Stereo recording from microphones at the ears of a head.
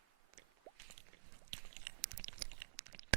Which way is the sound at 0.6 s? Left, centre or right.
Right.